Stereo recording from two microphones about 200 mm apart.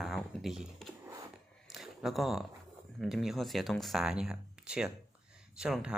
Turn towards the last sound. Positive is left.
turn(degrees=-5)  # may be behind; listen again after turning